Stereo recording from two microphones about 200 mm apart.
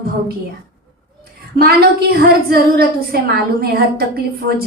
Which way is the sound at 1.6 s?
50° right (ahead or behind).